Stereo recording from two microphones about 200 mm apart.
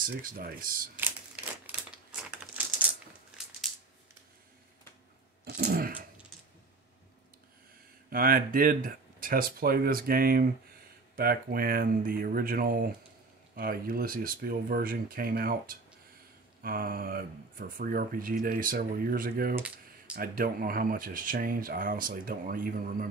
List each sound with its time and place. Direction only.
0.0 s speech: 45° right (ahead or behind)
0.9 s crumpling: 10° right (ahead or behind)
5.4 s a sound: 50° right (ahead or behind)
8.1 s speech: 45° right (ahead or behind)
19.5 s typing: 5° right (ahead or behind)
20.2 s speech: 45° right (ahead or behind)